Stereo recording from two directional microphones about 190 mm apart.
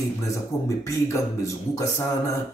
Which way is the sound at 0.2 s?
15° left (ahead or behind).